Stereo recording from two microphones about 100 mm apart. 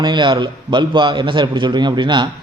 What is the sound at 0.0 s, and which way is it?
A man's voice, 50° right (ahead or behind).